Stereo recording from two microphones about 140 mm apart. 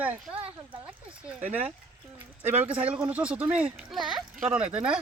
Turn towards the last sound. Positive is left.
turn(degrees=-10)  # may be behind; listen again after turning